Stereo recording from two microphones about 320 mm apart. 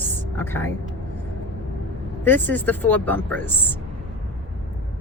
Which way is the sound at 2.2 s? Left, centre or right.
Centre.